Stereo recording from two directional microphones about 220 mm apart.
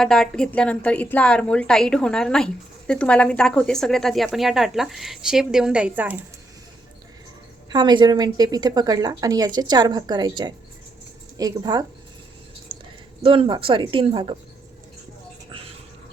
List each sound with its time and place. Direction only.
0.0 s a woman's voice: centre (ahead or behind)
7.7 s a woman's voice: 20° right (ahead or behind)
12.7 s a sound: 25° right (ahead or behind)
13.2 s speech: 25° right (ahead or behind)